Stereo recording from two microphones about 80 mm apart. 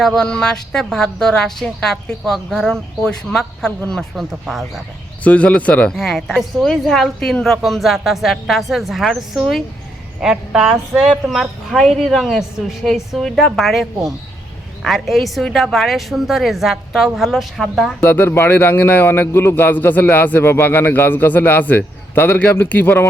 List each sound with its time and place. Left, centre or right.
0.0 s a woman's voice: centre
5.2 s a woman's voice: centre
18.0 s a man's voice: left